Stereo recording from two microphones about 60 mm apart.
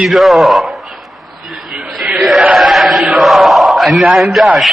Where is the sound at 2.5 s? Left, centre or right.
Centre.